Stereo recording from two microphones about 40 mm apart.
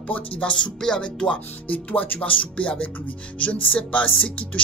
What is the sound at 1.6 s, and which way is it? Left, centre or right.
Music, left.